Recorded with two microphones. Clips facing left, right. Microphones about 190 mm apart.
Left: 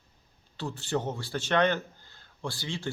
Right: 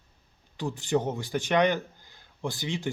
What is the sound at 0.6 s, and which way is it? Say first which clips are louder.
Speech: right 4 dB; 15° right (ahead or behind).